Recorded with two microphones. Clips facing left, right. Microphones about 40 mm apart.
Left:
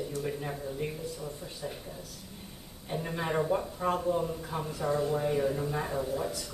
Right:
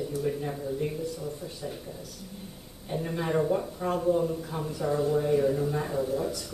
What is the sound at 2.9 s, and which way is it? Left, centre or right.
Speech, centre.